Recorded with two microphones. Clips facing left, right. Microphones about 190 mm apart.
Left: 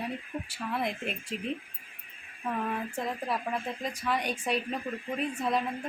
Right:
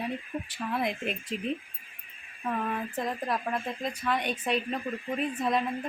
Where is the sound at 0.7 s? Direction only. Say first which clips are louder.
Right 2 dB; centre (ahead or behind).